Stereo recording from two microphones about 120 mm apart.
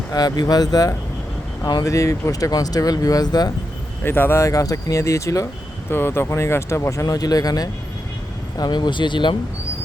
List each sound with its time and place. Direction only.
0.1 s speech: 30° left (ahead or behind)
4.0 s speech: 20° left (ahead or behind); by 9.3 s 40° left (ahead or behind)